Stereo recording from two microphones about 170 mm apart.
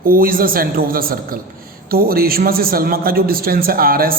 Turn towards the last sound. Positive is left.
turn(degrees=-60)  # may be behind; listen again after turning